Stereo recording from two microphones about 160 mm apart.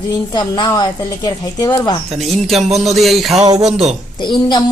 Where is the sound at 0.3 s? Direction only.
25° left (ahead or behind).